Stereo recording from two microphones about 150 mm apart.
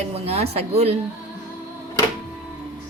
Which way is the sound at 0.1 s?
45° right (ahead or behind).